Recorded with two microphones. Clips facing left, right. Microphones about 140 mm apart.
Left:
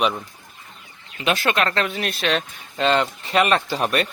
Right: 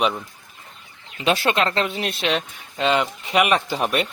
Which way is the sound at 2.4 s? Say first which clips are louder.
Left 1 dB; 5° right (ahead or behind).